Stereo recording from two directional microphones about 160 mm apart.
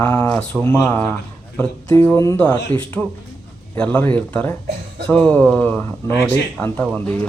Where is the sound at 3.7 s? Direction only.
10° left (ahead or behind).